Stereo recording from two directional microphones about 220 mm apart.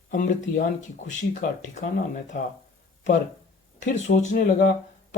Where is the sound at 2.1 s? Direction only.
35° left (ahead or behind).